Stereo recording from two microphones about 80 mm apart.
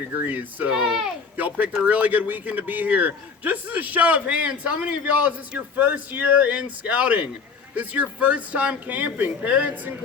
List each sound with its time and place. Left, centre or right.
0.1 s a man's voice: right
0.7 s speech: centre
1.4 s a man's voice: right